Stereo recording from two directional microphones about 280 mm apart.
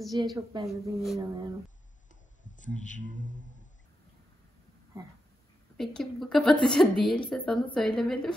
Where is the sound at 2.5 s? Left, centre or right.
Left.